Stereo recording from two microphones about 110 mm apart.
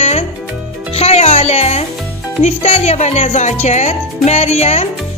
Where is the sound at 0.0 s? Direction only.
75° left (ahead or behind).